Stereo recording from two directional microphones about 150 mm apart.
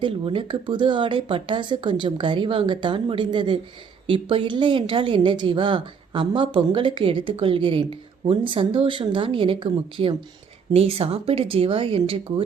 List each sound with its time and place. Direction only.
0.0 s a woman's voice: 35° right (ahead or behind)